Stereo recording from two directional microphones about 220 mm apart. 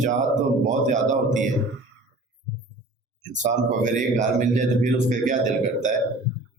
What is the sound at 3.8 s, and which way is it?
A man's voice, 35° right (ahead or behind).